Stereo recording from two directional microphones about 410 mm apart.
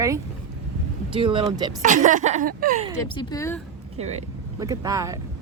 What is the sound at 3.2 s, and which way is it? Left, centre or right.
Speech, centre.